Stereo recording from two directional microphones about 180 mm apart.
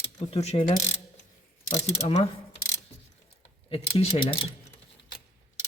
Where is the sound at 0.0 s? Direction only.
35° left (ahead or behind).